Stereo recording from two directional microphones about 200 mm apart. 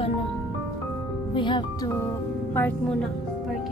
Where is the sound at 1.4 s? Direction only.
20° left (ahead or behind).